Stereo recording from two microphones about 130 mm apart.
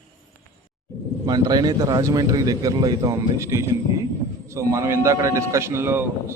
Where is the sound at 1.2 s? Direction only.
30° right (ahead or behind).